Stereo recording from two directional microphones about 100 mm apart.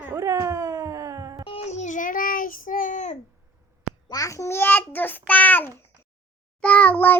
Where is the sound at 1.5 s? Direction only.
90° left.